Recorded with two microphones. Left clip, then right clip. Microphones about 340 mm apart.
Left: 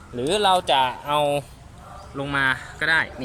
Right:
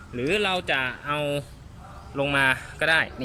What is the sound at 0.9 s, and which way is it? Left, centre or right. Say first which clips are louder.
Speech: left 6 dB; centre.